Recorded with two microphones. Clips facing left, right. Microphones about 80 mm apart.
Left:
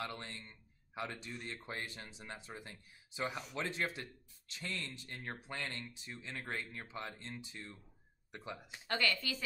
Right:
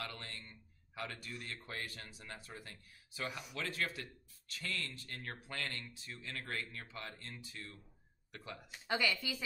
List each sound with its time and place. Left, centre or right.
0.0 s speech: left
8.8 s speech: centre